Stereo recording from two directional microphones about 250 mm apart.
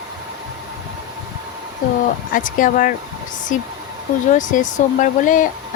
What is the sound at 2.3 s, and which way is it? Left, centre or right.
Speech, left.